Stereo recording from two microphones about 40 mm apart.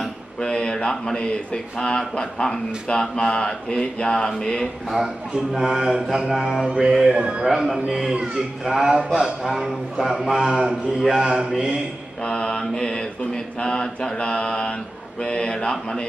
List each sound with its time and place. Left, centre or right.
0.3 s a sound: left
0.9 s a man's voice: centre
4.6 s a man's voice: centre
6.7 s a man's voice: right
7.5 s a man's voice: centre
12.2 s a man's voice: left